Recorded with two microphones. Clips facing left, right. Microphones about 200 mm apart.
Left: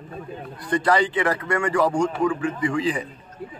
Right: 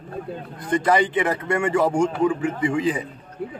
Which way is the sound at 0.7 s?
20° right (ahead or behind).